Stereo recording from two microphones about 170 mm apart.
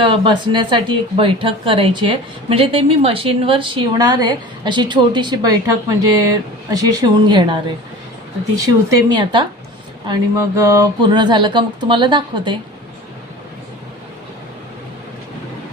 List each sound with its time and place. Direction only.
0.0 s speech: 30° right (ahead or behind)